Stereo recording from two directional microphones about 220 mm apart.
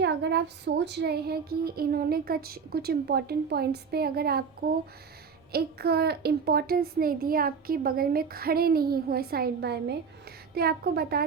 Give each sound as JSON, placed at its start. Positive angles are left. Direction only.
{"t": 0.0, "sound": "speech", "side_deg": -50}